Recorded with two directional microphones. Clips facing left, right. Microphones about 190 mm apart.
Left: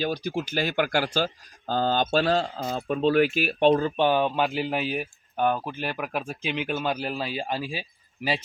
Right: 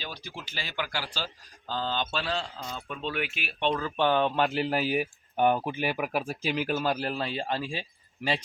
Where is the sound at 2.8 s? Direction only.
40° left (ahead or behind).